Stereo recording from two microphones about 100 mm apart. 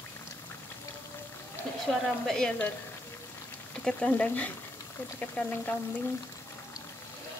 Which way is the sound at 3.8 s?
10° left (ahead or behind).